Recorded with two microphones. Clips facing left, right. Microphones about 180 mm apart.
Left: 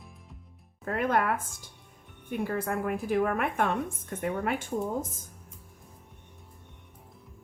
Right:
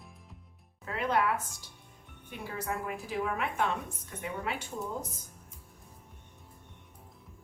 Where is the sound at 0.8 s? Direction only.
50° left (ahead or behind).